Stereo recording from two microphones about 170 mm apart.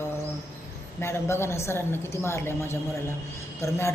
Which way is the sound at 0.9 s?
15° left (ahead or behind).